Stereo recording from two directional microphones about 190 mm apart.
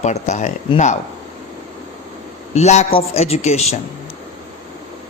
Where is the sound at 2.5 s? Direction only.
35° left (ahead or behind).